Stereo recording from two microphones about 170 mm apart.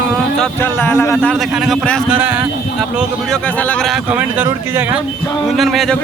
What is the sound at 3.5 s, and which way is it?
A man's voice, 5° left (ahead or behind).